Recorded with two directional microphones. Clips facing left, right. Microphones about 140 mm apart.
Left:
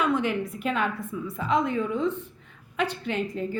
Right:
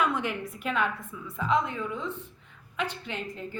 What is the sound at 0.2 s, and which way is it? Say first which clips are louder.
Speech: left 5 dB; 30° left (ahead or behind).